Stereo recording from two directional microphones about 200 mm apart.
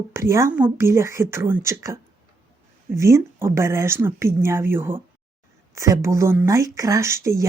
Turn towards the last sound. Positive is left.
turn(degrees=-15)  # may be behind; listen again after turning